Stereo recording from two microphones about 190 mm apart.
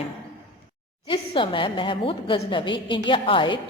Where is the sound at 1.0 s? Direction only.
25° left (ahead or behind).